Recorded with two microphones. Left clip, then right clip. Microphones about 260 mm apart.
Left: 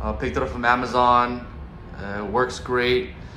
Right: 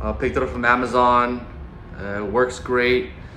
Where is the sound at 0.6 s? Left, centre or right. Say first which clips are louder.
Right 2 dB; centre.